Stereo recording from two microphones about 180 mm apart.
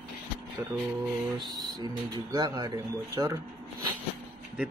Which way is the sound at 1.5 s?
20° right (ahead or behind).